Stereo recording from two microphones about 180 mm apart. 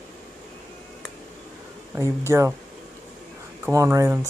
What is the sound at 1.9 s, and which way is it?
Speech, 15° right (ahead or behind).